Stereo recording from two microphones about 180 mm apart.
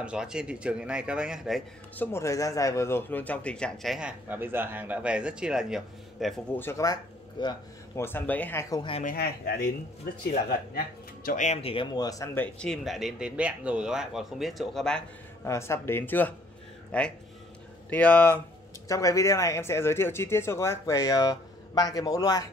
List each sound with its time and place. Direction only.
0.0 s a man's voice: 5° right (ahead or behind)
2.0 s a man's voice: 15° left (ahead or behind)
6.6 s speech: 15° left (ahead or behind)
8.0 s speech: 10° left (ahead or behind)
9.0 s speech: 55° left (ahead or behind)
11.2 s speech: 40° left (ahead or behind); by 12.4 s 20° left (ahead or behind)
12.5 s a man's voice: centre (ahead or behind)
15.4 s speech: 15° left (ahead or behind)